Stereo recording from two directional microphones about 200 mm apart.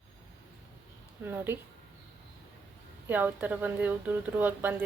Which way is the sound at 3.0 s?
10° right (ahead or behind).